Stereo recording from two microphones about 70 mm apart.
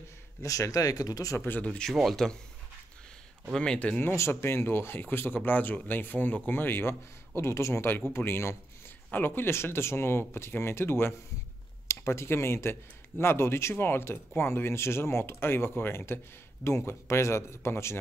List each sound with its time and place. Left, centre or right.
0.4 s speech: left
1.4 s speech: left
1.9 s speech: centre
3.5 s speech: centre
4.0 s speech: left